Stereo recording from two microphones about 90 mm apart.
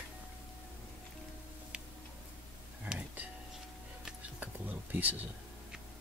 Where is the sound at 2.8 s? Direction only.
15° right (ahead or behind).